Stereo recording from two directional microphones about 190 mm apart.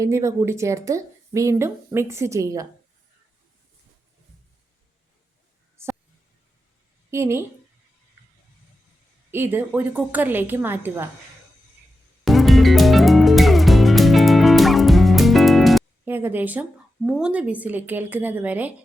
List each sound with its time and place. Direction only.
0.0 s speech: 15° right (ahead or behind)
5.8 s a sound: 15° right (ahead or behind)
7.1 s speech: 15° right (ahead or behind)
9.3 s speech: 10° right (ahead or behind)
12.2 s music: centre (ahead or behind)
16.0 s speech: 10° right (ahead or behind)